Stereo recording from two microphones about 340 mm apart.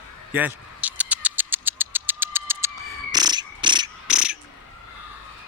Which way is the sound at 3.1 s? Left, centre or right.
Centre.